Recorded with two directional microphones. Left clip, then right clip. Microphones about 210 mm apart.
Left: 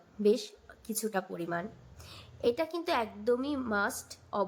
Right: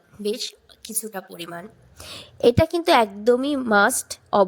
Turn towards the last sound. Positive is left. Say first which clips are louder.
# right 14 dB
turn(degrees=-40)  # may be behind; listen again after turning